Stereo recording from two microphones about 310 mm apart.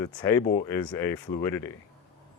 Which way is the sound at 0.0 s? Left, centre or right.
Centre.